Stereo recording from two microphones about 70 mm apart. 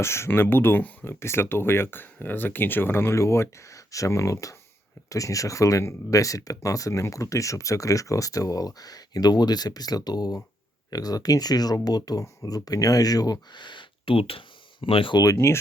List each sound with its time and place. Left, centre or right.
0.0 s speech: left
15.2 s speech: left